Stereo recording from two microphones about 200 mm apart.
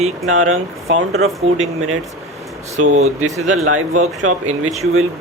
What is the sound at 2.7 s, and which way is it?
Speech, 35° right (ahead or behind).